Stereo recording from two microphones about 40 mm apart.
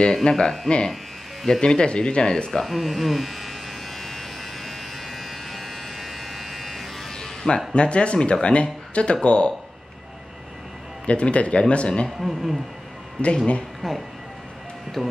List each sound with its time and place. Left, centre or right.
0.2 s speech: centre
0.7 s speech: left
2.6 s electric shaver: centre
7.7 s speech: left
11.1 s speech: left
12.2 s speech: centre
13.2 s speech: left
13.8 s speech: centre